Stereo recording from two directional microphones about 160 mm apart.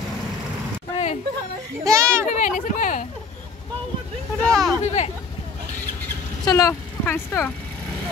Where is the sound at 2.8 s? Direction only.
55° left (ahead or behind).